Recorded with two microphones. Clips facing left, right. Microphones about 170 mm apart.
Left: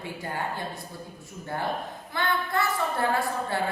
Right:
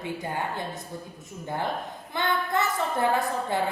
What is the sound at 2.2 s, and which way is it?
Speech, 20° right (ahead or behind).